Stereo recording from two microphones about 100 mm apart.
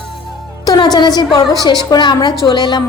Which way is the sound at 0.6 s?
45° left (ahead or behind).